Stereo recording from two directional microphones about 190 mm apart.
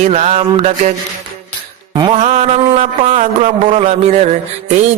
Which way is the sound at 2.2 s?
40° right (ahead or behind).